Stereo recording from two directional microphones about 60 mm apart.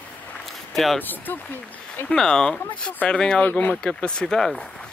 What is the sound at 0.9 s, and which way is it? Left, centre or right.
Speech, left.